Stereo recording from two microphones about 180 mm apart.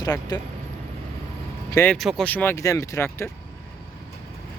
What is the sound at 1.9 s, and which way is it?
Speech, centre (ahead or behind).